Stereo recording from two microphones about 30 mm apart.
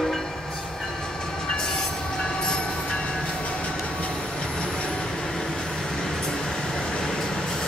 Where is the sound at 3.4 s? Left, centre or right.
Left.